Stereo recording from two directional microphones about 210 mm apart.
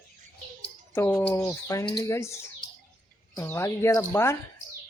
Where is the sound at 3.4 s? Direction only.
10° left (ahead or behind).